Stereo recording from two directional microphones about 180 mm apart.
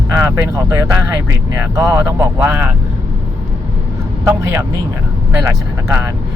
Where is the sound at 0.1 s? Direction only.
15° right (ahead or behind).